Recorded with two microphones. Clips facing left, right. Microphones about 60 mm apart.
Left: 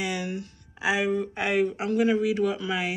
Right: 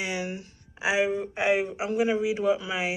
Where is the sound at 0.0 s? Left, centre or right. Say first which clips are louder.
Left 1 dB; right.